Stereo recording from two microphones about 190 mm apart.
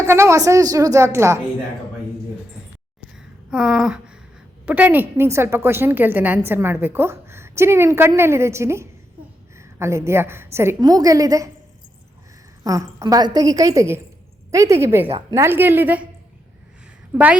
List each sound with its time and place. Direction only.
0.0 s a woman's voice: 15° right (ahead or behind)
3.2 s a sound: 5° right (ahead or behind)
4.6 s a woman's voice: 10° right (ahead or behind)
12.6 s a woman's voice: 15° right (ahead or behind)